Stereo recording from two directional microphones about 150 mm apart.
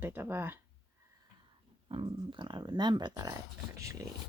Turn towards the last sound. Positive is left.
turn(degrees=-20)  # may be behind; listen again after turning